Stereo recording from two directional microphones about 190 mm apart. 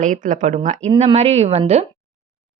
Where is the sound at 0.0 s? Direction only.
40° right (ahead or behind).